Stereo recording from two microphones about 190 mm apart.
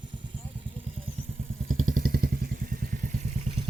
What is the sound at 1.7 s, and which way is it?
Vehicle, 45° right (ahead or behind).